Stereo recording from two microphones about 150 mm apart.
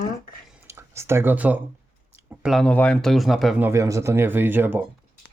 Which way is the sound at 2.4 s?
Centre (ahead or behind).